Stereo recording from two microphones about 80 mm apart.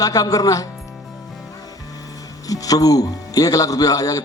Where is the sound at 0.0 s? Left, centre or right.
Left.